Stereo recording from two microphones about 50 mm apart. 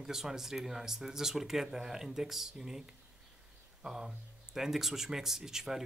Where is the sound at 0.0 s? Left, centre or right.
Centre.